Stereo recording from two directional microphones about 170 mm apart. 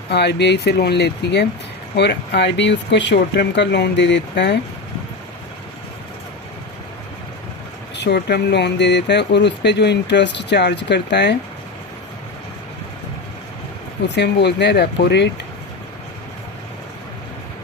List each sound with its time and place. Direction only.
0.1 s speech: 80° left
7.9 s speech: 90° left
14.2 s speech: 90° left